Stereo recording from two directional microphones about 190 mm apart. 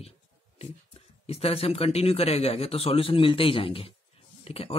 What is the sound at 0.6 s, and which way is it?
Speech, 30° left (ahead or behind).